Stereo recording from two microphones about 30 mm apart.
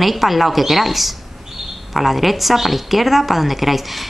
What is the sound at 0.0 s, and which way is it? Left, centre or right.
A woman's voice, centre.